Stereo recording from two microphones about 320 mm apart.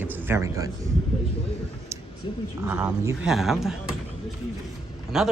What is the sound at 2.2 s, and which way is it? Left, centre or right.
Speech, centre.